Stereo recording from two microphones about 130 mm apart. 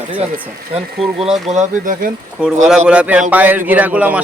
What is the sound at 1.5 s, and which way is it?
Speech, 80° right.